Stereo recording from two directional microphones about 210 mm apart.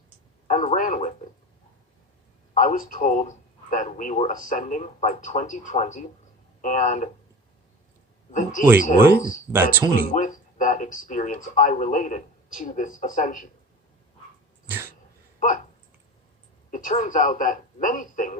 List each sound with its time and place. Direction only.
0.4 s speech: 35° left (ahead or behind)
2.6 s speech: 40° left (ahead or behind)
8.3 s speech: 35° left (ahead or behind)
9.5 s speech: 10° right (ahead or behind)
9.9 s speech: 35° left (ahead or behind)
15.4 s a sound: 35° left (ahead or behind)
16.7 s speech: 40° left (ahead or behind)